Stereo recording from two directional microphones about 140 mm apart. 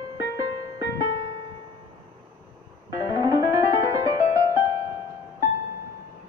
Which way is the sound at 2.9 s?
25° right (ahead or behind).